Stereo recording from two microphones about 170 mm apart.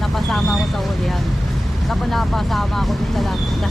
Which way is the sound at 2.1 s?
Centre (ahead or behind).